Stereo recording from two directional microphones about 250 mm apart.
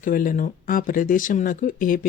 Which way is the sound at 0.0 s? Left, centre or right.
Left.